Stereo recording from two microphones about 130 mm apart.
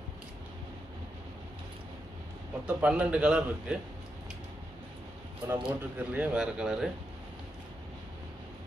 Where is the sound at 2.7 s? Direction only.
10° right (ahead or behind).